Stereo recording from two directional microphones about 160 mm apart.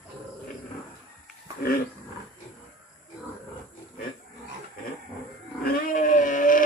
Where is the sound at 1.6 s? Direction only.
70° left (ahead or behind).